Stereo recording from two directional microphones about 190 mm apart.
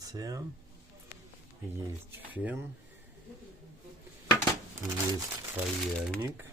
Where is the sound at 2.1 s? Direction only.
10° right (ahead or behind).